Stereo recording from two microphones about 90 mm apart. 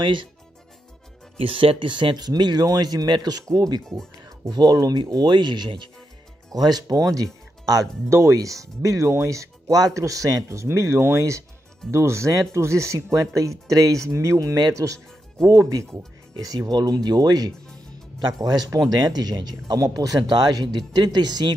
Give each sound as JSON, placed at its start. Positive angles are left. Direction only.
{"t": 0.0, "sound": "speech", "side_deg": -60}
{"t": 1.4, "sound": "speech", "side_deg": -85}
{"t": 6.5, "sound": "speech", "side_deg": -45}
{"t": 8.1, "sound": "speech", "side_deg": -35}